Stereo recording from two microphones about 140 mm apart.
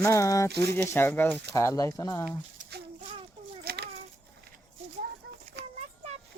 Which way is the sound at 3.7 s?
90° right.